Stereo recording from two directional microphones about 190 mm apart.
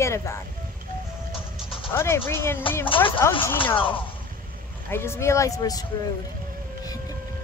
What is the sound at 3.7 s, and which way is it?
Speech, 25° left (ahead or behind).